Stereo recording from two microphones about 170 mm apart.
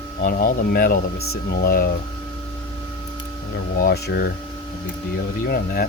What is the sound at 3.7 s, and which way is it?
Speech, 65° left (ahead or behind).